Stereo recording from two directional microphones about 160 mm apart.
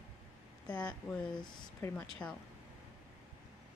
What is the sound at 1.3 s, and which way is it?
Speech, 25° left (ahead or behind).